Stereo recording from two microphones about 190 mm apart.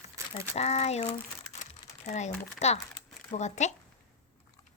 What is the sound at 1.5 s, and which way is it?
Crumpling, 5° right (ahead or behind).